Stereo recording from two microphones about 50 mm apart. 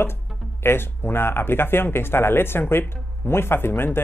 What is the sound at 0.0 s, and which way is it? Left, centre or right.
Speech, left.